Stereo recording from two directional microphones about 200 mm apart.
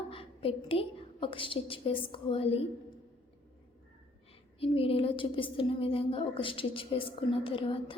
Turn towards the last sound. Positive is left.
turn(degrees=25)  # may be behind; listen again after turning